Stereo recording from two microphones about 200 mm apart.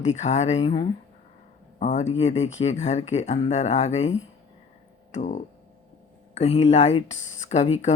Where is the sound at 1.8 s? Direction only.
35° left (ahead or behind).